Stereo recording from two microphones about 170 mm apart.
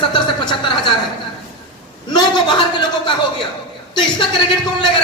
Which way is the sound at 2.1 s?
25° left (ahead or behind).